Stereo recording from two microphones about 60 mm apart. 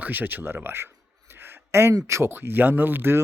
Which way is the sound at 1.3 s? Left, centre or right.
Right.